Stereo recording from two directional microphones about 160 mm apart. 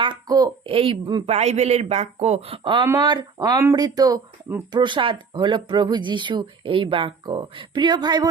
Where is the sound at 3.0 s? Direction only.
25° right (ahead or behind).